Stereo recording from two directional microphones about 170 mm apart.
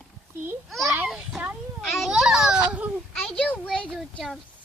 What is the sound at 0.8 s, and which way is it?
Speech, 15° right (ahead or behind).